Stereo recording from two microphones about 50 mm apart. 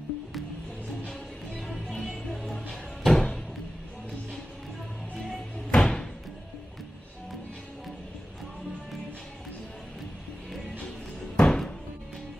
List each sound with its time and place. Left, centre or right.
1.8 s music: centre
5.7 s music: centre
11.3 s music: centre